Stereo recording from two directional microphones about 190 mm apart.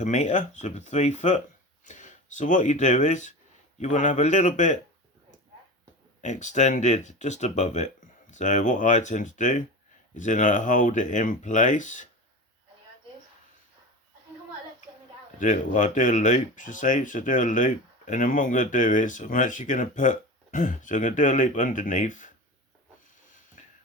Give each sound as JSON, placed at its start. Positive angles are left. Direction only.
{"t": 0.0, "sound": "speech", "side_deg": 40}
{"t": 6.2, "sound": "speech", "side_deg": 40}
{"t": 15.4, "sound": "speech", "side_deg": 40}